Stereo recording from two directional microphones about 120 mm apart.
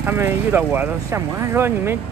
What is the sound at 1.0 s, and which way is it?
Speech, 25° right (ahead or behind).